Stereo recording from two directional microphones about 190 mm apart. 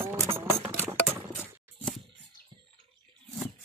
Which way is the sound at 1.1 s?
5° right (ahead or behind).